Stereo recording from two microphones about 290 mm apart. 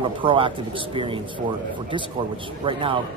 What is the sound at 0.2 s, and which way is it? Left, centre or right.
A man's voice, centre.